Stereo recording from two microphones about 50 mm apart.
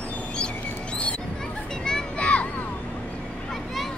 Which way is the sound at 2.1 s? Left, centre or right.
Left.